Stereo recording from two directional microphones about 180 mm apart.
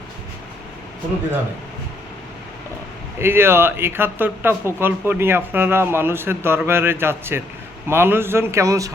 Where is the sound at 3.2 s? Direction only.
15° right (ahead or behind).